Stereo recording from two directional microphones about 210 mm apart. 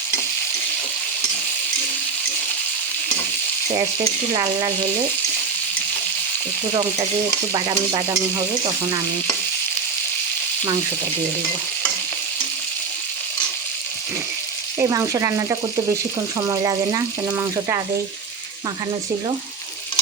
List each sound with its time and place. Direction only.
7.5 s stir: 20° right (ahead or behind)
14.8 s speech: 15° right (ahead or behind)